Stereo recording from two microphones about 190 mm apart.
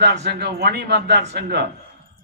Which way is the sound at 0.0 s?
65° right (ahead or behind).